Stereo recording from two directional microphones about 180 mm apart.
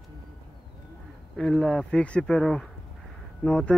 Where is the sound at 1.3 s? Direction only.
Centre (ahead or behind).